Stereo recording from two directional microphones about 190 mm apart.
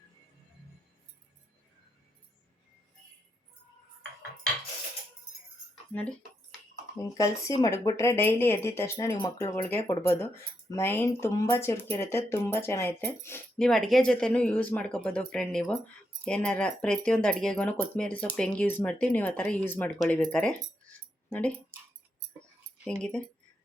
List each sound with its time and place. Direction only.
5.9 s speech: 10° left (ahead or behind)
22.9 s speech: 5° left (ahead or behind)